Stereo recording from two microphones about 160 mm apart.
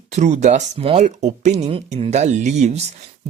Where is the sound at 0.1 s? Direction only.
45° right (ahead or behind).